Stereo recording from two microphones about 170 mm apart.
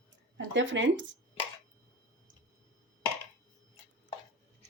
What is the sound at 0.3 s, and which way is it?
Speech, 90° right.